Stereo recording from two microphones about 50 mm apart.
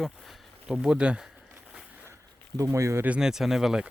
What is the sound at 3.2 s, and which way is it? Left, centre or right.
Speech, centre.